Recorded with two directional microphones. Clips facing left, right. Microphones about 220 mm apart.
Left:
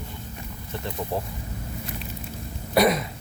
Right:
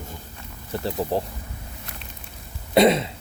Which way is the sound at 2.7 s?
25° right (ahead or behind).